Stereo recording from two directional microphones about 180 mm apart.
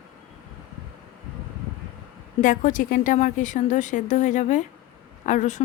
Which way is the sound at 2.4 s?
45° left (ahead or behind).